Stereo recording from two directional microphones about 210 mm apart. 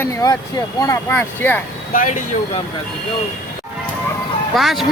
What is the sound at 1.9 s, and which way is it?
Speech, 40° left (ahead or behind).